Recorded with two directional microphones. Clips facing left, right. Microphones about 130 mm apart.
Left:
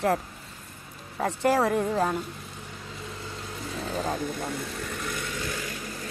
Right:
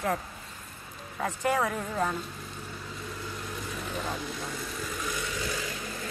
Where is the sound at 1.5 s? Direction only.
30° left (ahead or behind).